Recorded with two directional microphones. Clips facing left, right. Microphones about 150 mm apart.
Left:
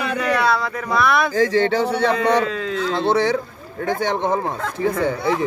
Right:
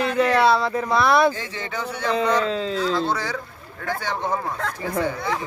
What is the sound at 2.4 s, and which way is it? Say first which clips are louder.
Speech: even; 30° right (ahead or behind).